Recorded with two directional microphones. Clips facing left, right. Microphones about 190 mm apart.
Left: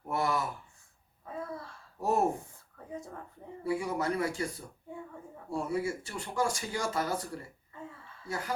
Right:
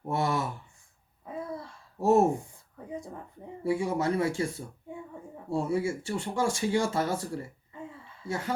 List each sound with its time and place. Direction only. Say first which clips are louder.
0.1 s speech: right 2 dB; 25° right (ahead or behind)
1.2 s babbling: right 3 dB; 15° right (ahead or behind)
2.9 s a sound: right 3 dB; 15° right (ahead or behind)
3.6 s speech: right 4 dB; 25° right (ahead or behind)
8.3 s speech: right 4 dB; 25° right (ahead or behind)